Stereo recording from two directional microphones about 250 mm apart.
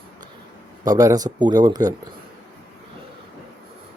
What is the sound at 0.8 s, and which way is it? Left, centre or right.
Speech, centre.